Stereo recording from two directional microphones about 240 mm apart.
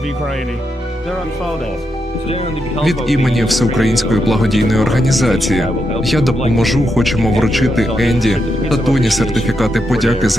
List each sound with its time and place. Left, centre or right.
2.8 s speech: centre